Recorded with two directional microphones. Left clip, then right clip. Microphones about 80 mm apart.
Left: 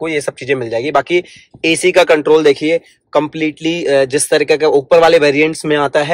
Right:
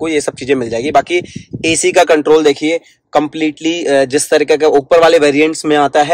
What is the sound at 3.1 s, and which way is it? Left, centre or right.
Speech, right.